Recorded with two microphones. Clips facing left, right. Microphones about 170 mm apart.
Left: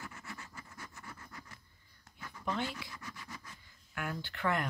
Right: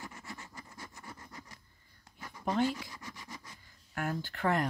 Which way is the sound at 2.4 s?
40° right (ahead or behind).